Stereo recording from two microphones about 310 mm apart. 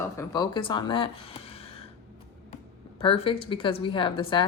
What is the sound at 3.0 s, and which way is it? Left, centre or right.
Speech, centre.